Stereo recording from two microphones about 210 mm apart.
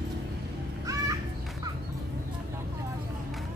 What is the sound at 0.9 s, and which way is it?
Music, 15° right (ahead or behind).